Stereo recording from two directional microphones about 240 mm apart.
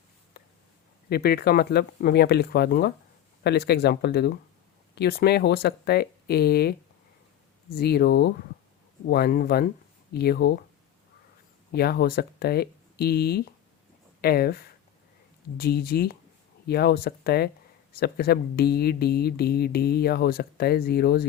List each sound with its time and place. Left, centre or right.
0.4 s a sound: left
1.1 s speech: left
7.8 s speech: left
11.7 s speech: left